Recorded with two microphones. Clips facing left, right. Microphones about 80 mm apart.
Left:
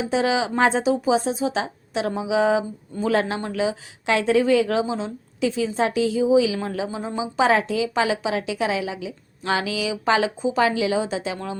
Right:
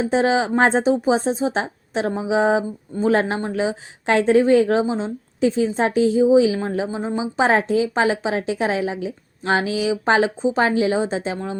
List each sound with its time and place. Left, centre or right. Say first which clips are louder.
0.0 s speech: right 3 dB; right